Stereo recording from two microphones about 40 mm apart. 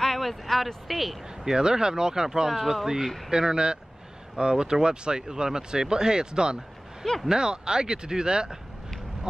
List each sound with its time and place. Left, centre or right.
0.0 s speech: centre
1.4 s speech: centre
3.3 s speech: centre